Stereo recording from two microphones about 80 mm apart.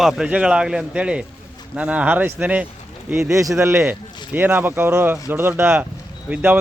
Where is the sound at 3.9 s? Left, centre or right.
Right.